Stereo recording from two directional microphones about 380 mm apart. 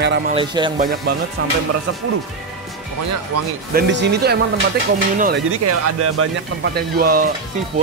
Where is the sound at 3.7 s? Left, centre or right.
Right.